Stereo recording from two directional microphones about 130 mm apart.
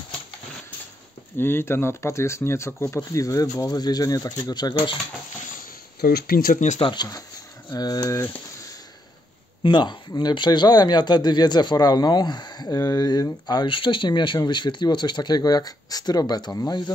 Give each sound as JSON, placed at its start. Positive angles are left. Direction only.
{"t": 1.4, "sound": "speech", "side_deg": 20}
{"t": 6.4, "sound": "speech", "side_deg": 75}
{"t": 6.8, "sound": "speech", "side_deg": 35}
{"t": 9.6, "sound": "speech", "side_deg": 40}